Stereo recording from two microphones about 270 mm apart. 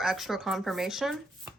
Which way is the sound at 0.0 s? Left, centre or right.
Centre.